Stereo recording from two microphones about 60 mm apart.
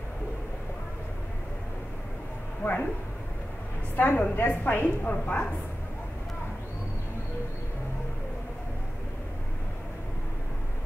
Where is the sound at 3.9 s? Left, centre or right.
Left.